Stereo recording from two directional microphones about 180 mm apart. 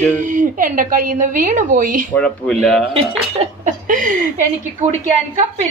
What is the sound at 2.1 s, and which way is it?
Speech, 5° left (ahead or behind).